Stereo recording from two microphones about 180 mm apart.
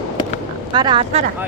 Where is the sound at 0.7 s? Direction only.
25° right (ahead or behind).